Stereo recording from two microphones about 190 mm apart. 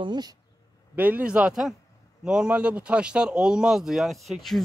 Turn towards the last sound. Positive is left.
turn(degrees=0)  # may be behind; listen again after turning